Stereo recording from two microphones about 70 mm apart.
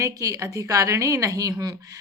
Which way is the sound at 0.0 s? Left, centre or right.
Right.